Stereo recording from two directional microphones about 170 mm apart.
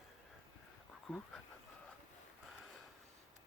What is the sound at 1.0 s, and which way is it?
Speech, 5° left (ahead or behind).